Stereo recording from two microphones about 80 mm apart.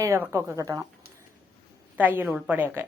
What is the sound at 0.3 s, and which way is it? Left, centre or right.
Speech, right.